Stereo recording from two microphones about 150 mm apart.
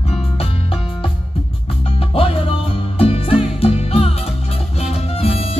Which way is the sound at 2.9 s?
40° left (ahead or behind).